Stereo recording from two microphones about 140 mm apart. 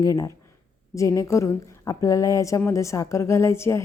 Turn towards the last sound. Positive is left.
turn(degrees=20)  # may be behind; listen again after turning